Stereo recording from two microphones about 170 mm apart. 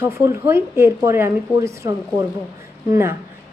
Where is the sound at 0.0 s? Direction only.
15° right (ahead or behind).